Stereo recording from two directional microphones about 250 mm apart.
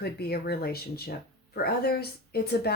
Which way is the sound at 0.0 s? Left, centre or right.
Left.